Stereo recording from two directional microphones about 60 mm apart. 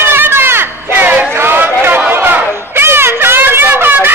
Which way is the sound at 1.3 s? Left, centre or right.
Right.